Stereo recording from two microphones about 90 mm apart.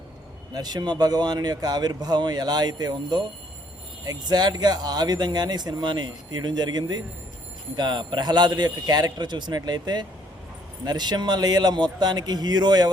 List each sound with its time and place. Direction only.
0.5 s speech: 50° right (ahead or behind)